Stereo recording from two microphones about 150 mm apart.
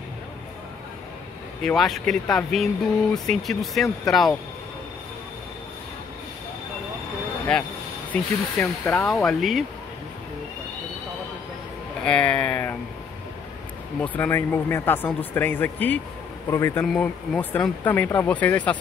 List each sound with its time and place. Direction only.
1.6 s speech: centre (ahead or behind)
7.5 s speech: 5° left (ahead or behind)
12.0 s speech: 5° left (ahead or behind)
14.0 s speech: 10° left (ahead or behind)
16.8 s speech: centre (ahead or behind)